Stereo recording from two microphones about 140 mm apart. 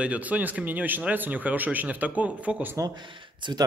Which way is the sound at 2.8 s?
35° right (ahead or behind).